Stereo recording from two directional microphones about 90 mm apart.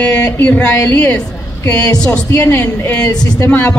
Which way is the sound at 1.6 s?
40° left (ahead or behind).